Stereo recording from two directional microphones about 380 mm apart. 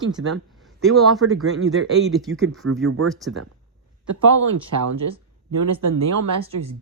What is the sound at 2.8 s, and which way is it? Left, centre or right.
Speech, right.